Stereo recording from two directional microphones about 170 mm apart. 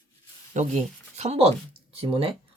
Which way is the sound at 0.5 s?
40° right (ahead or behind).